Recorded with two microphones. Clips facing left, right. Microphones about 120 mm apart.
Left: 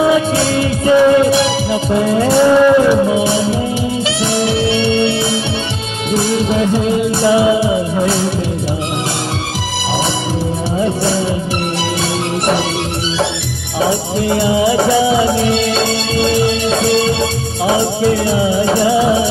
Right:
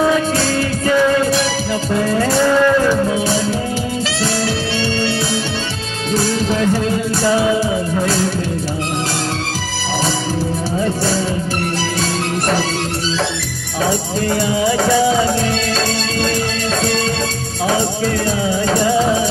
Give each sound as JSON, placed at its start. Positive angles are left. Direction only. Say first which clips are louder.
{"t": 0.0, "sound": "music", "louder": "left 3 dB", "side_deg": 15}
{"t": 6.1, "sound": "music", "louder": "left 3 dB", "side_deg": 20}
{"t": 10.8, "sound": "music", "louder": "left 3 dB", "side_deg": 20}
{"t": 13.8, "sound": "music", "louder": "left 2 dB", "side_deg": 20}
{"t": 17.6, "sound": "music", "louder": "left 4 dB", "side_deg": 15}